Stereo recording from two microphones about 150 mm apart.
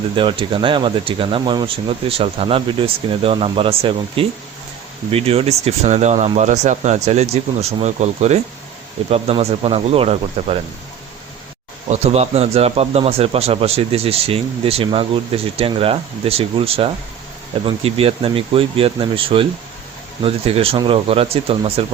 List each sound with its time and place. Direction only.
0.2 s a man's voice: 35° right (ahead or behind)
11.9 s a man's voice: 45° right (ahead or behind)